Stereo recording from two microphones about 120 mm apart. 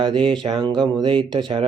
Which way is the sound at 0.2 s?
5° left (ahead or behind).